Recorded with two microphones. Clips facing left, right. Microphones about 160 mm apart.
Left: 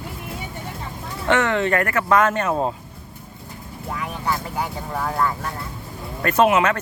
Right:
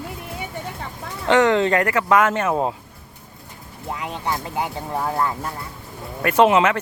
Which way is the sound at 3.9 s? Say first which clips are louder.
Even; 20° right (ahead or behind).